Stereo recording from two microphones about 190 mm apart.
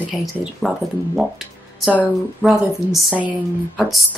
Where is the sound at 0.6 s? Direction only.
Centre (ahead or behind).